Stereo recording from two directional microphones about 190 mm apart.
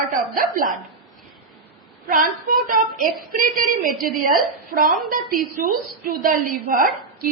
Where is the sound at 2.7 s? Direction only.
45° right (ahead or behind).